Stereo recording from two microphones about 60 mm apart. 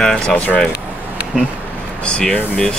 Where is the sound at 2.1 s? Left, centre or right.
Centre.